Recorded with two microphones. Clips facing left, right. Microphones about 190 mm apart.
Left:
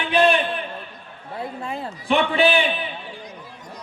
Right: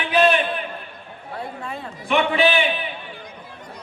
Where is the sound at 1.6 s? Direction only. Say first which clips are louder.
Left 3 dB; 35° left (ahead or behind).